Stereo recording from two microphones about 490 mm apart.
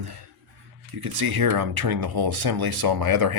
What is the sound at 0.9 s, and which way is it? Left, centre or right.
Speech, right.